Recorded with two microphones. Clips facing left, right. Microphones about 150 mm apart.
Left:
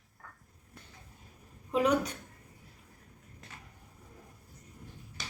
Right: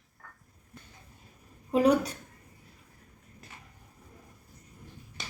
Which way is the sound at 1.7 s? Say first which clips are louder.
Right 4 dB; 35° right (ahead or behind).